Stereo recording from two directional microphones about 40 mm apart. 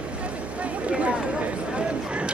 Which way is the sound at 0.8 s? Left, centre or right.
Right.